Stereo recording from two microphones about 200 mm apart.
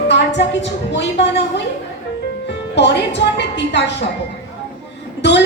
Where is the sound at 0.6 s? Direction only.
60° left (ahead or behind).